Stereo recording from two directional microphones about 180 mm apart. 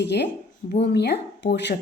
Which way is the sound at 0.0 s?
70° left (ahead or behind).